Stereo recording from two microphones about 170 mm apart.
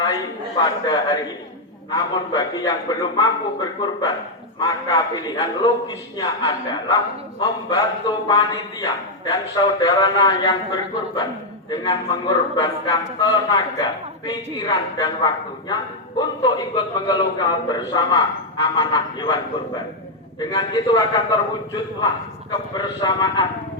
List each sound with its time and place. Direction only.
0.6 s a man's voice: 25° left (ahead or behind)
22.8 s a man's voice: 25° left (ahead or behind)